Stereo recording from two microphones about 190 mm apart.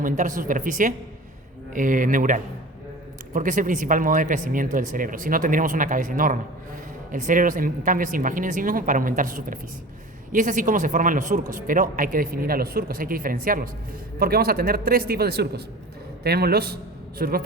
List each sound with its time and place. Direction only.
0.0 s a man's voice: 45° right (ahead or behind)